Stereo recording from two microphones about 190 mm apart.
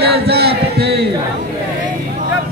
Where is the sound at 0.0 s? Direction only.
60° right (ahead or behind).